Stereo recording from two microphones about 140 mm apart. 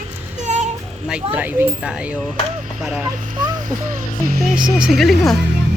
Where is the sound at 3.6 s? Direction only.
70° right (ahead or behind).